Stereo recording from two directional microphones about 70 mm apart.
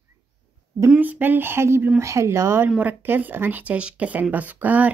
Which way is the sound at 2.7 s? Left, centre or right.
Right.